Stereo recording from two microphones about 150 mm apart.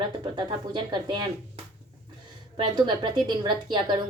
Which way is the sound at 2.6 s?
30° right (ahead or behind).